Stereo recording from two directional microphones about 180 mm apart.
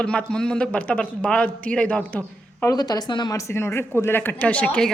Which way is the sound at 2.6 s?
20° left (ahead or behind).